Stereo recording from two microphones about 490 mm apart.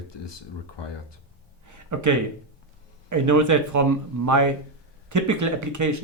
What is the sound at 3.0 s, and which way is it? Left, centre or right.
Speech, right.